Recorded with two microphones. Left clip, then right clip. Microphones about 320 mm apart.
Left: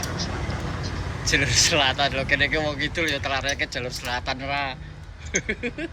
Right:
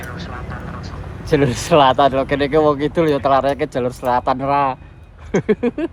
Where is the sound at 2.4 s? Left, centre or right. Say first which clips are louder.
Right 8 dB; centre.